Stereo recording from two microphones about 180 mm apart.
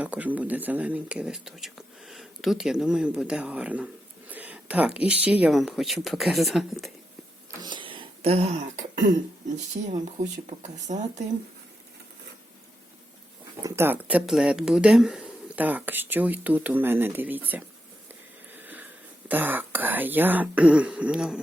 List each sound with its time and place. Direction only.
0.0 s speech: 10° right (ahead or behind)
7.6 s a sound: 25° right (ahead or behind)
10.4 s speech: 40° right (ahead or behind)
13.6 s speech: 15° right (ahead or behind)
18.5 s a sound: 10° right (ahead or behind)
19.3 s speech: 10° right (ahead or behind)